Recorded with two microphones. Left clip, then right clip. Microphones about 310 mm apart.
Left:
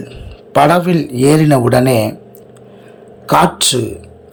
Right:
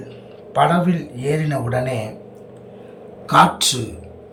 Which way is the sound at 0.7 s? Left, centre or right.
Centre.